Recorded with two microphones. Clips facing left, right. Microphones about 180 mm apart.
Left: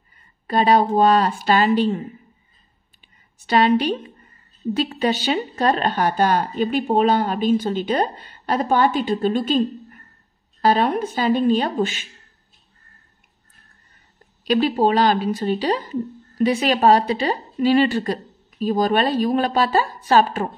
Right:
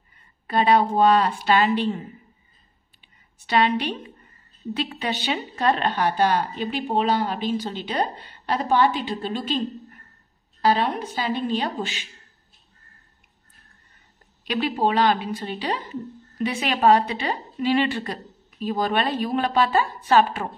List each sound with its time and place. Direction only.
0.5 s a woman's voice: 40° left (ahead or behind)
3.4 s a woman's voice: 40° left (ahead or behind)
10.6 s a woman's voice: 50° left (ahead or behind)
14.4 s a woman's voice: 40° left (ahead or behind)